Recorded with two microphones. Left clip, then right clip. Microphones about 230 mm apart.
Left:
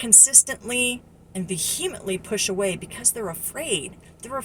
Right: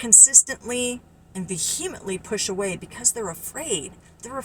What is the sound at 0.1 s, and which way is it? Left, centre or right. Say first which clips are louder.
Speech: right 2 dB; centre.